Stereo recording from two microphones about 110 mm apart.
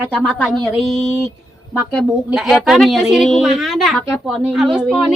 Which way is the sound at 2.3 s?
5° right (ahead or behind).